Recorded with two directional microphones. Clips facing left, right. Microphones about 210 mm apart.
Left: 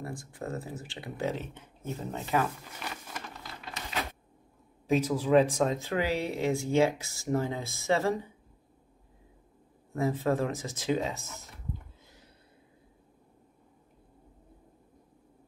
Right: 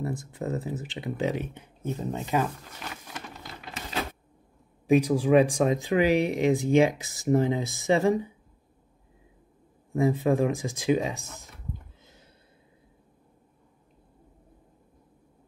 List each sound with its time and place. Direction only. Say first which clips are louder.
0.0 s speech: right 6 dB; 20° right (ahead or behind)
2.8 s a sound: right 1 dB; centre (ahead or behind)
4.8 s speech: right 5 dB; 15° right (ahead or behind)
9.9 s speech: right 5 dB; 15° right (ahead or behind)